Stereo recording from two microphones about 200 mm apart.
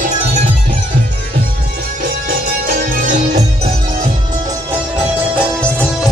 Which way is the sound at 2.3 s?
45° right (ahead or behind).